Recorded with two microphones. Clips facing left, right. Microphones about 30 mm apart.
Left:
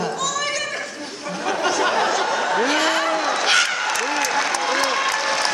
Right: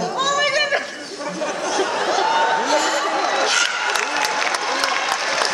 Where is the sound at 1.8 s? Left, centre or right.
Left.